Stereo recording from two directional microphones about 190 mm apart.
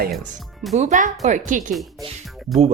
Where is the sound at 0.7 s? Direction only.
40° right (ahead or behind).